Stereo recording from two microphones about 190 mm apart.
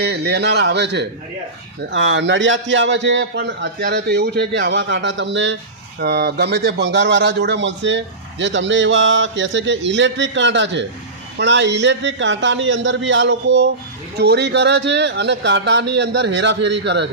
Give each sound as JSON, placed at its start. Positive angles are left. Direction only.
{"t": 0.0, "sound": "a man's voice", "side_deg": -60}
{"t": 1.9, "sound": "speech", "side_deg": -75}
{"t": 6.0, "sound": "a man's voice", "side_deg": -55}